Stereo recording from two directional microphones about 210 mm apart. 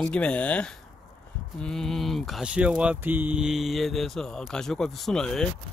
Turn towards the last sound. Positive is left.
turn(degrees=5)  # may be behind; listen again after turning